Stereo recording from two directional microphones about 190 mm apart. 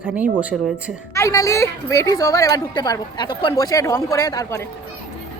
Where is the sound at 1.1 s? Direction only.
15° left (ahead or behind).